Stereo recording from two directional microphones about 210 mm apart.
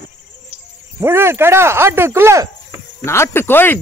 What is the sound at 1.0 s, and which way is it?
Speech, 10° right (ahead or behind).